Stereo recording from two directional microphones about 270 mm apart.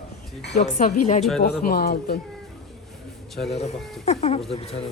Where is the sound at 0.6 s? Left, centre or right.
Left.